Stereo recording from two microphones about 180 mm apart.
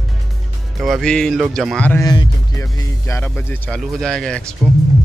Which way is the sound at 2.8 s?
15° left (ahead or behind).